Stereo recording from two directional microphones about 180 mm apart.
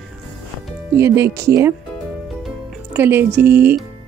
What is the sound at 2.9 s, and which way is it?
Speech, 10° right (ahead or behind).